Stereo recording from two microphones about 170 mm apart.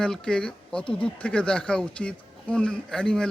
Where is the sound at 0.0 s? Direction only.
5° left (ahead or behind).